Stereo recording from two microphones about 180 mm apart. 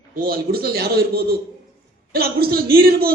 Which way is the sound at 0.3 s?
55° right (ahead or behind).